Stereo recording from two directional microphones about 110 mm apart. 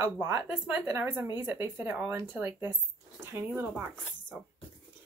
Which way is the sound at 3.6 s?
15° right (ahead or behind).